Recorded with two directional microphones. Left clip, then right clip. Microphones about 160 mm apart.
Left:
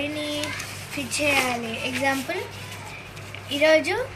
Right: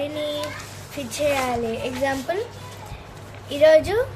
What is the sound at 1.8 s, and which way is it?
Speech, 60° right (ahead or behind).